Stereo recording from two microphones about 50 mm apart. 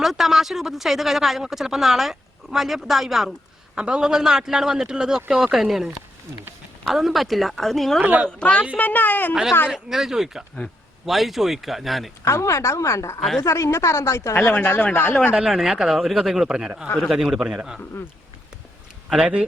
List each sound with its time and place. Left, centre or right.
0.0 s speech: centre
3.8 s a man's voice: centre
8.0 s a woman's voice: right
8.3 s speech: left
8.7 s a woman's voice: left
9.3 s a man's voice: centre
12.2 s a woman's voice: left
13.4 s a woman's voice: left
14.3 s a woman's voice: left
15.4 s a man's voice: centre
16.6 s a man's voice: centre
19.2 s a man's voice: right